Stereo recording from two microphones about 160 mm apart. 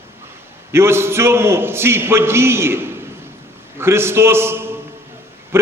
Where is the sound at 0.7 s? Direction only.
15° right (ahead or behind).